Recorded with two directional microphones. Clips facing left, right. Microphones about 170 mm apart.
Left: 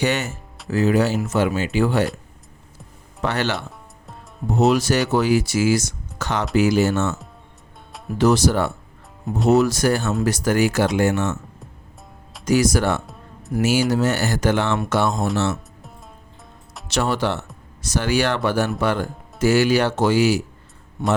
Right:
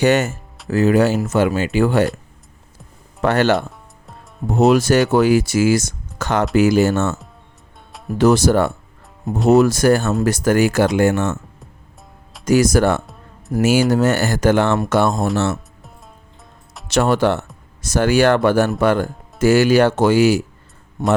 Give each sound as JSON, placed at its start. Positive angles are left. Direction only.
{"t": 0.0, "sound": "speech", "side_deg": -45}
{"t": 3.2, "sound": "speech", "side_deg": -50}
{"t": 8.2, "sound": "speech", "side_deg": -50}
{"t": 12.5, "sound": "speech", "side_deg": -50}
{"t": 16.9, "sound": "speech", "side_deg": -50}